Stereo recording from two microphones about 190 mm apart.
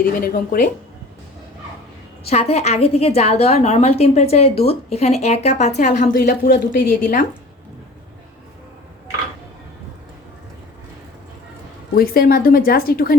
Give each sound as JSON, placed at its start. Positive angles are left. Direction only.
{"t": 0.2, "sound": "speech", "side_deg": 50}
{"t": 2.2, "sound": "a woman's voice", "side_deg": 30}
{"t": 11.9, "sound": "speech", "side_deg": 50}